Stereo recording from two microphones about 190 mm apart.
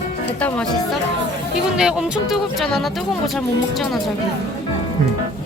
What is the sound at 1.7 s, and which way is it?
Speech, 5° right (ahead or behind).